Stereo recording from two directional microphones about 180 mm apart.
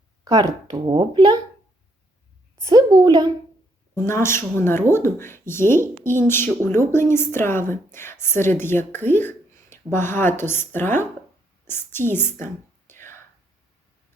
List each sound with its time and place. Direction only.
0.3 s a woman's voice: 20° right (ahead or behind)
2.6 s a woman's voice: 20° right (ahead or behind)
4.0 s speech: 15° left (ahead or behind)
12.9 s whispering: 10° left (ahead or behind)